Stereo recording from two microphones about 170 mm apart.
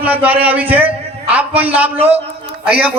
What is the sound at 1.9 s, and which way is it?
Speech, 35° right (ahead or behind).